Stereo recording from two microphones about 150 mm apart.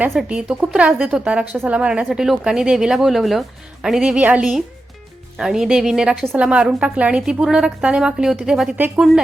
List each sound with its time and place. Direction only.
0.1 s a woman's voice: 5° right (ahead or behind)